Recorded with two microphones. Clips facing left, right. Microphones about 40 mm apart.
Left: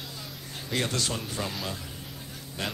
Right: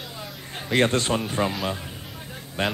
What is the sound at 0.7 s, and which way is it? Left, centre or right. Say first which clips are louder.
Speech: right 9 dB; right.